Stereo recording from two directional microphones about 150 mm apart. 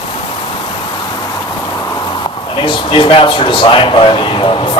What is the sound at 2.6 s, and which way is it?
Speech, 35° left (ahead or behind).